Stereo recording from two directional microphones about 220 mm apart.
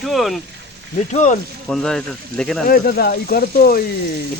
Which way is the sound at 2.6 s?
40° left (ahead or behind).